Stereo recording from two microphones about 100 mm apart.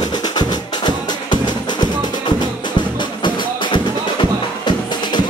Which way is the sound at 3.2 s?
50° left (ahead or behind).